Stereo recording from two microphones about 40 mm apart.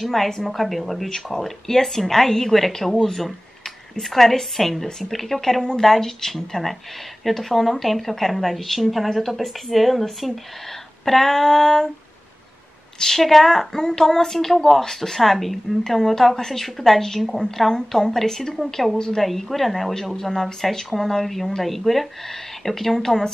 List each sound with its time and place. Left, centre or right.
0.0 s a woman's voice: centre
5.6 s speech: centre
5.9 s a woman's voice: centre
13.0 s a woman's voice: centre
18.9 s a woman's voice: centre
19.2 s a woman's voice: centre